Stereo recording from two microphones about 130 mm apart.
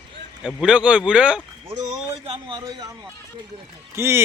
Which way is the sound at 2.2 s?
40° right (ahead or behind).